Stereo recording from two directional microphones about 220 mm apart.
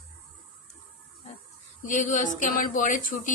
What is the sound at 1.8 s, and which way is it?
Speech, 35° left (ahead or behind).